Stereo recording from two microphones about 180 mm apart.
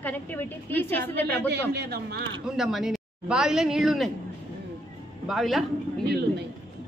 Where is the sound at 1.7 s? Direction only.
65° right (ahead or behind).